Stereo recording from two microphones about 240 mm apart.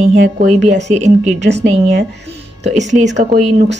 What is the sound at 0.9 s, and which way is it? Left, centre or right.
Speech, right.